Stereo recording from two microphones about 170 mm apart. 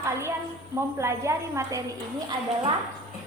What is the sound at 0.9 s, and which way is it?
Speech, 15° right (ahead or behind).